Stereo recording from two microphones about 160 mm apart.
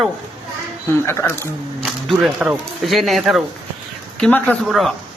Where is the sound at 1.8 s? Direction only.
5° right (ahead or behind).